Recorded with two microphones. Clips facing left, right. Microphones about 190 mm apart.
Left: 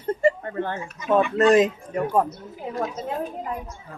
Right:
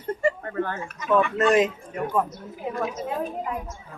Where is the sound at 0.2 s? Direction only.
25° left (ahead or behind).